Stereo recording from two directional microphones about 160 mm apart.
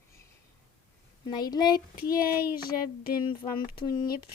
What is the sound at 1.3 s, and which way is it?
Speech, 25° left (ahead or behind).